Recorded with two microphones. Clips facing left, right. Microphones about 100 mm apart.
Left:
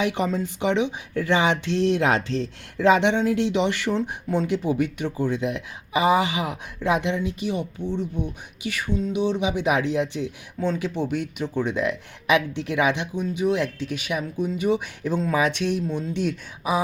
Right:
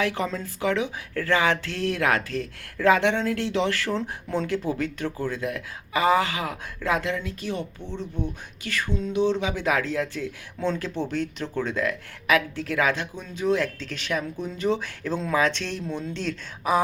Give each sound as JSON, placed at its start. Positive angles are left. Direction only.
{"t": 0.0, "sound": "speech", "side_deg": 20}